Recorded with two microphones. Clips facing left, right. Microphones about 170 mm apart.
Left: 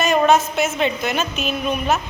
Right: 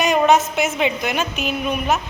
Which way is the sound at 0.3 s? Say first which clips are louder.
Even; 15° right (ahead or behind).